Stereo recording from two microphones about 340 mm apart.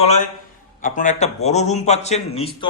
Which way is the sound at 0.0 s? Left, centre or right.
Centre.